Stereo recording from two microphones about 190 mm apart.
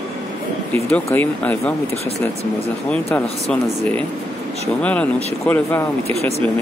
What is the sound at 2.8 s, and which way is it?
Speech, 5° left (ahead or behind).